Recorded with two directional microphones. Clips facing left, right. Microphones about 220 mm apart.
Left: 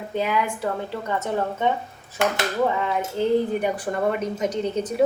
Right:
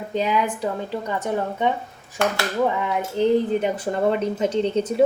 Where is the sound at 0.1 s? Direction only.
20° right (ahead or behind).